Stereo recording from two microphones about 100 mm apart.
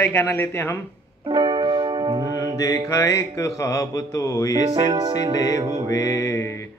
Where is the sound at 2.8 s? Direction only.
30° left (ahead or behind).